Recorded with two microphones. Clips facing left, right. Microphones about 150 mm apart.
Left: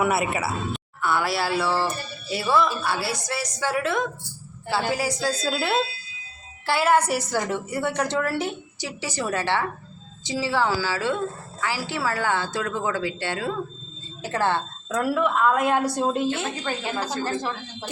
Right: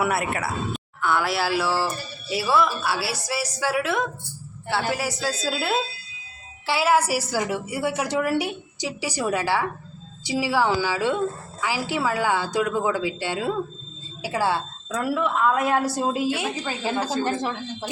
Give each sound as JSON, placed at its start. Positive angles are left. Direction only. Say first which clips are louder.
{"t": 0.0, "sound": "a woman's voice", "louder": "left 1 dB", "side_deg": 0}
{"t": 14.8, "sound": "a woman's voice", "louder": "left 2 dB", "side_deg": 5}
{"t": 16.8, "sound": "speech", "louder": "right 6 dB", "side_deg": -30}